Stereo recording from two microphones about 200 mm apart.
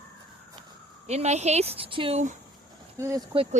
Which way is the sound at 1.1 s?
35° right (ahead or behind).